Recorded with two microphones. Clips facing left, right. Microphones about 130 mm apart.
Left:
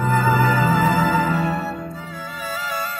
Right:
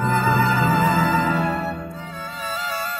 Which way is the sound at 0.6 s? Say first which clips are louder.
Left 1 dB; centre (ahead or behind).